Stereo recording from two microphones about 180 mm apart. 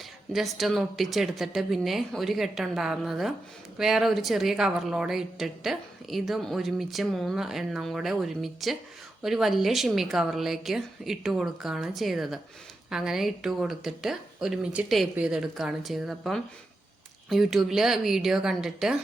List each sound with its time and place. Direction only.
0.3 s a woman's voice: centre (ahead or behind)